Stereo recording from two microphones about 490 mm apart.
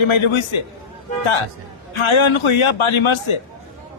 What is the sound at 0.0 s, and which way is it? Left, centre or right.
Speech, left.